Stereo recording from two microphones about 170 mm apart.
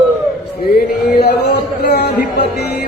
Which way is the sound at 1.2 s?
75° left (ahead or behind).